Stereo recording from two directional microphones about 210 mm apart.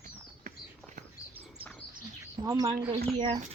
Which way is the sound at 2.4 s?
20° right (ahead or behind).